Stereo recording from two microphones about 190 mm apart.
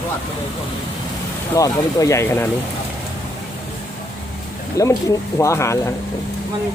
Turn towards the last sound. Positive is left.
turn(degrees=15)  # may be behind; listen again after turning